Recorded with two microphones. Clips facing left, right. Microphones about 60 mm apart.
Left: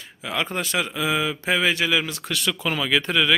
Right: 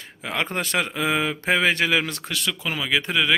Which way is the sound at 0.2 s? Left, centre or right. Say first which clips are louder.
Even; right.